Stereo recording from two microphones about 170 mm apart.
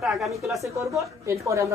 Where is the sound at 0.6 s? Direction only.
20° right (ahead or behind).